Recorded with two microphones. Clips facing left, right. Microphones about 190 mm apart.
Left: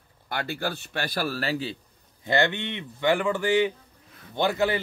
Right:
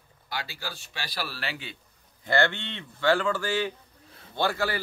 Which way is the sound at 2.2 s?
20° left (ahead or behind).